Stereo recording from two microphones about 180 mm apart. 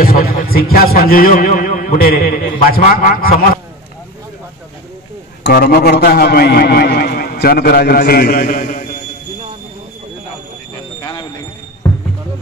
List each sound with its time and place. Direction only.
0.0 s a man's voice: 55° left (ahead or behind)
5.4 s a man's voice: 55° left (ahead or behind)
11.0 s a sound: 25° left (ahead or behind)